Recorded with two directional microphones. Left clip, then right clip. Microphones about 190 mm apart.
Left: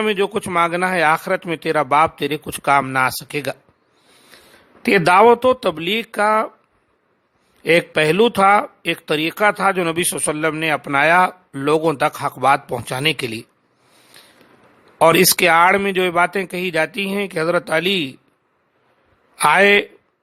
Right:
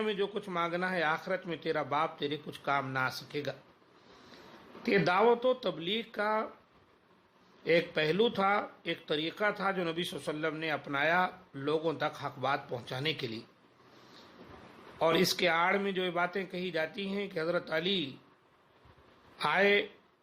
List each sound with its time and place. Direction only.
0.0 s speech: 50° left (ahead or behind)
4.8 s speech: 50° left (ahead or behind)
7.6 s speech: 50° left (ahead or behind)
14.2 s a sound: 50° left (ahead or behind)
14.9 s speech: 50° left (ahead or behind)
19.4 s speech: 50° left (ahead or behind)